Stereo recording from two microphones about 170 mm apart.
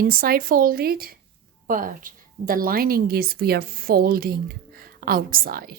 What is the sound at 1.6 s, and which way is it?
A woman's voice, 55° right (ahead or behind).